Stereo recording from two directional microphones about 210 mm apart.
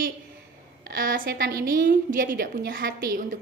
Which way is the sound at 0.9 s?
40° right (ahead or behind).